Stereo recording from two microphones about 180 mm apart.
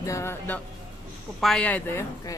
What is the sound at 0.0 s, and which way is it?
Speech, 15° left (ahead or behind).